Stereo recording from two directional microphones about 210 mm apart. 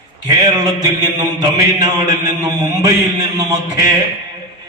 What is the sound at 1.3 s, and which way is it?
Speech, 20° right (ahead or behind).